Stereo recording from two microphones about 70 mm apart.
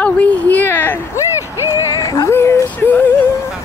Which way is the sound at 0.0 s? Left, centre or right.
Left.